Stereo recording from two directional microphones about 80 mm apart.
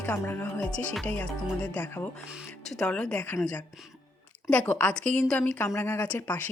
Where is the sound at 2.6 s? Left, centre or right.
Centre.